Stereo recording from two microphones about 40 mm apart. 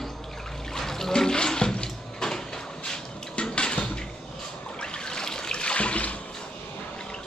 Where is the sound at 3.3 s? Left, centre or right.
Left.